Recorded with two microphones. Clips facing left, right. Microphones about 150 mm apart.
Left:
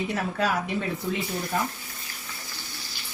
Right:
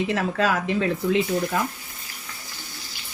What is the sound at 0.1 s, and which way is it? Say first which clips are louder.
Speech: right 4 dB; 80° right.